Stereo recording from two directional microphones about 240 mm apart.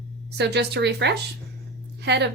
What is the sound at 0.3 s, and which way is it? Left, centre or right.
A woman's voice, right.